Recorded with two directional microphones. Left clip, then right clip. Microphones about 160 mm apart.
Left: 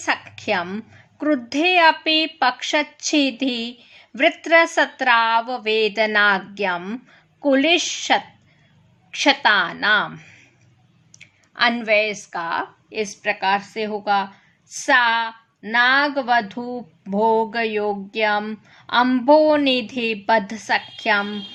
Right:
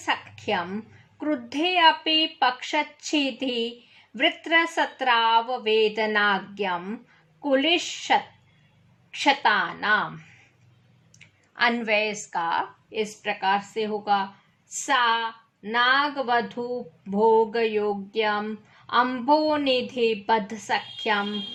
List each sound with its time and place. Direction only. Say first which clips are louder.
0.0 s a woman's voice: left 4 dB; 35° left (ahead or behind)
11.5 s a woman's voice: left 5 dB; 25° left (ahead or behind)